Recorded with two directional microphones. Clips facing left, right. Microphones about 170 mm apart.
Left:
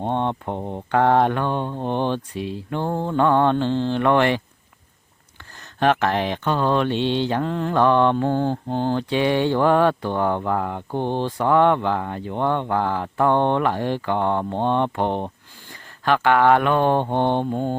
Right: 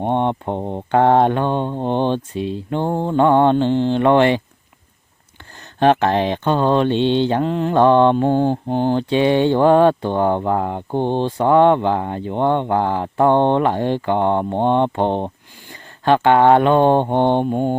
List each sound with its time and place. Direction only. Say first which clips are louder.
0.0 s speech: right 4 dB; 20° right (ahead or behind)
5.8 s speech: right 5 dB; 25° right (ahead or behind)